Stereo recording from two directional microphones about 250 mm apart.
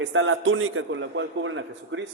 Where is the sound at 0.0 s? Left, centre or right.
Right.